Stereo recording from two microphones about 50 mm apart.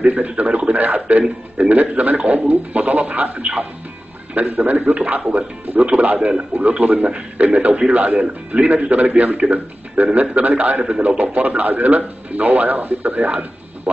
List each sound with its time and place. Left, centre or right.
0.0 s a man's voice: right
4.8 s a man's voice: right
6.1 s a man's voice: centre